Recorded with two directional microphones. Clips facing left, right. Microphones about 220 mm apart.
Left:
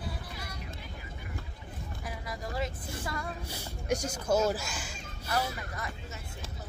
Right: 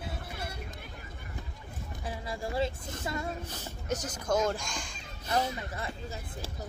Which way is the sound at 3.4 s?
10° left (ahead or behind).